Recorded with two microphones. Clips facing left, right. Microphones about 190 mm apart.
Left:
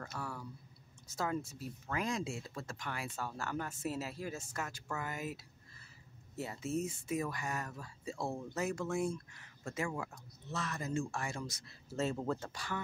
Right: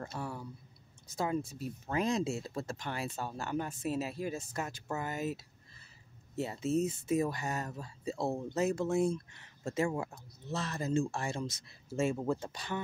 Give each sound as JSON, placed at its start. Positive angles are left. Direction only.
{"t": 0.0, "sound": "speech", "side_deg": -25}
{"t": 12.0, "sound": "speech", "side_deg": -10}